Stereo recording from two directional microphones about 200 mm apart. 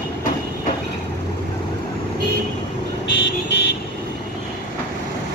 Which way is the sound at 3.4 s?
60° left (ahead or behind).